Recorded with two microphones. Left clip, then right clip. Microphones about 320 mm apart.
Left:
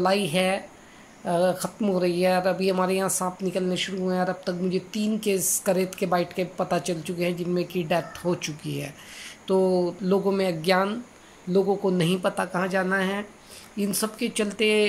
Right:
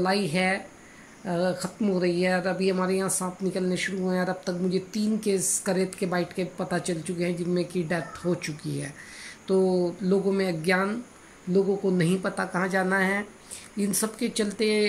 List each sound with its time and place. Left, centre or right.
0.0 s speech: centre